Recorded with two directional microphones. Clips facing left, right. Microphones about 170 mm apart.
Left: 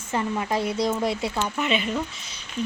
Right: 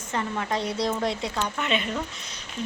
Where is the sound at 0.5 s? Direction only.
5° left (ahead or behind).